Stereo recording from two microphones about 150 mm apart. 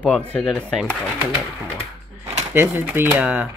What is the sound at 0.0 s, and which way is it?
Speech, 10° left (ahead or behind).